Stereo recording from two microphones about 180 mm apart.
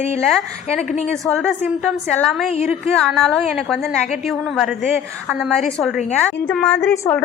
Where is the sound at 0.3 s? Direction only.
Centre (ahead or behind).